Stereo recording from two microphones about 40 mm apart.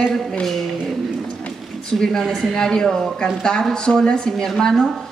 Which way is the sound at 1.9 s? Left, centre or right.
Centre.